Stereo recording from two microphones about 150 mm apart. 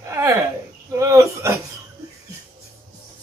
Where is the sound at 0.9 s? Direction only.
20° right (ahead or behind).